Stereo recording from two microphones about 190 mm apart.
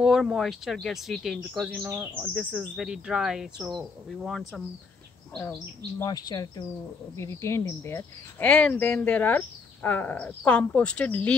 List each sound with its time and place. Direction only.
0.0 s speech: 5° right (ahead or behind)
6.0 s speech: 20° left (ahead or behind)